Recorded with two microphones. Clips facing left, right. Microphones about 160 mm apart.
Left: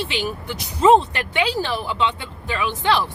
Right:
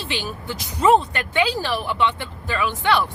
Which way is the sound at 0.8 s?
25° left (ahead or behind).